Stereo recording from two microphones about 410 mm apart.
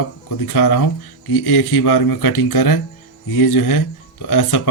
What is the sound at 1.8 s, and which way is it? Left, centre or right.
Speech, left.